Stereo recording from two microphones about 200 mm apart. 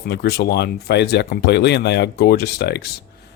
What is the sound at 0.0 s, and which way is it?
Speech, 55° left (ahead or behind).